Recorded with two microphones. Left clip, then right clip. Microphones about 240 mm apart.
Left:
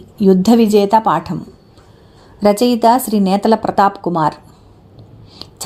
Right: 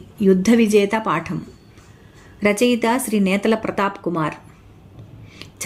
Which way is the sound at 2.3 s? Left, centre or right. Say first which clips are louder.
Left 5 dB; centre.